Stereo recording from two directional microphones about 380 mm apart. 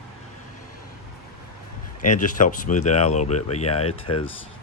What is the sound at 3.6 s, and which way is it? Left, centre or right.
Speech, left.